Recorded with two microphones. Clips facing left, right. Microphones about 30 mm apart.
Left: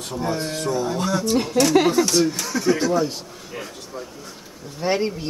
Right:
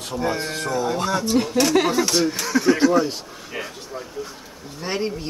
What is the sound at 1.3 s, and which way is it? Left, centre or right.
Speech, centre.